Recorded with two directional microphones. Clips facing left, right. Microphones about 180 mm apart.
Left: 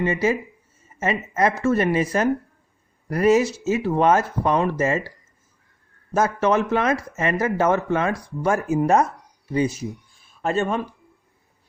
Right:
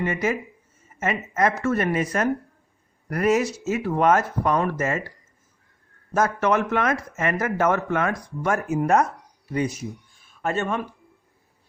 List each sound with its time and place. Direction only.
0.0 s a woman's voice: 30° left (ahead or behind)
6.1 s speech: 30° left (ahead or behind)